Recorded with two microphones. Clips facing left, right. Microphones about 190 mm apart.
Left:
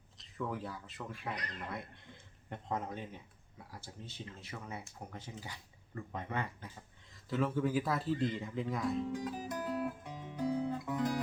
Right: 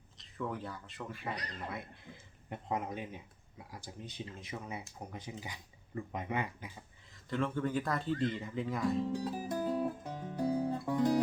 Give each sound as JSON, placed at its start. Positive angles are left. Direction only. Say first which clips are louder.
{"t": 0.2, "sound": "speech", "louder": "even", "side_deg": 0}
{"t": 2.5, "sound": "speech", "louder": "right 2 dB", "side_deg": -10}
{"t": 7.1, "sound": "speech", "louder": "left 1 dB", "side_deg": 5}
{"t": 9.1, "sound": "guitar", "louder": "right 3 dB", "side_deg": -30}